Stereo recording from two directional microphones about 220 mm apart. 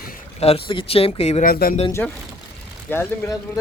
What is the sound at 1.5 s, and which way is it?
Speech, 40° left (ahead or behind).